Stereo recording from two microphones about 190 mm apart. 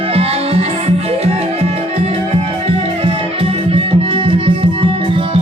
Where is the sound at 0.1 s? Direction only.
30° right (ahead or behind).